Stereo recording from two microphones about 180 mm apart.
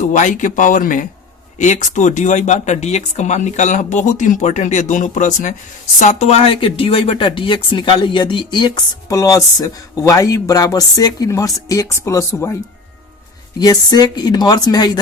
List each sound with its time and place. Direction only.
0.0 s speech: 45° left (ahead or behind); by 12.5 s 15° left (ahead or behind)
13.6 s speech: 20° left (ahead or behind)